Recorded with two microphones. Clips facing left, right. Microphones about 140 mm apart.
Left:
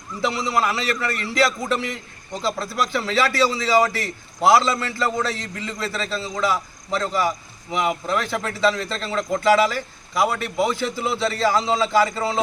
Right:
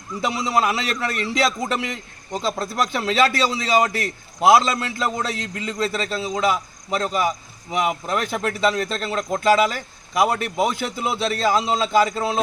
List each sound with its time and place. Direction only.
0.6 s a man's voice: 20° right (ahead or behind)